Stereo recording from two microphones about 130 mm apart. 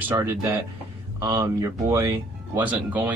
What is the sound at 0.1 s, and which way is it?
A man's voice, 20° right (ahead or behind).